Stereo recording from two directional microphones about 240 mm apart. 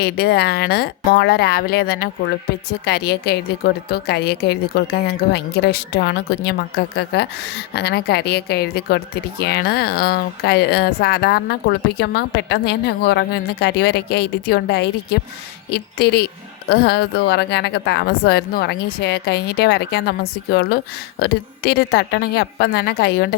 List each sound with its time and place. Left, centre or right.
0.0 s speech: left